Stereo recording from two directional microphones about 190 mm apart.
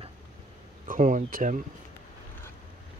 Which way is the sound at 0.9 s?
45° right (ahead or behind).